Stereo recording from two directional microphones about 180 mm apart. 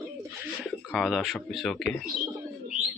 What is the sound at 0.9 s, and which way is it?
Speech, centre (ahead or behind).